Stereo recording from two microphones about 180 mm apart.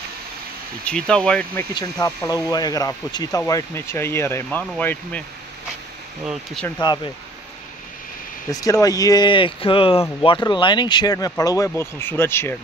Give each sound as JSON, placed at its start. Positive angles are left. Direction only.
{"t": 0.8, "sound": "speech", "side_deg": 5}
{"t": 1.7, "sound": "speech", "side_deg": 20}
{"t": 6.8, "sound": "speech", "side_deg": 25}
{"t": 8.5, "sound": "speech", "side_deg": 20}